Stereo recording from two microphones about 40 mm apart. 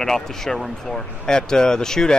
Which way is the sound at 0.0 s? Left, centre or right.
Centre.